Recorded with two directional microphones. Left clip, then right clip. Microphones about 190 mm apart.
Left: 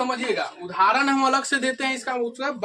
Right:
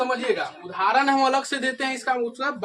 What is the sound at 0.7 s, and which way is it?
A man's voice, 35° left (ahead or behind).